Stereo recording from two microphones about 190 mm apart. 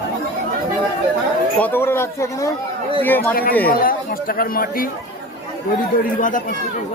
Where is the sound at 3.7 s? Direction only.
50° left (ahead or behind).